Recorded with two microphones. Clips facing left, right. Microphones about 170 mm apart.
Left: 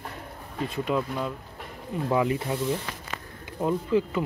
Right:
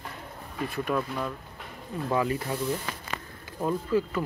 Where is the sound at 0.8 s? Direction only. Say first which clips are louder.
Left 2 dB; 15° left (ahead or behind).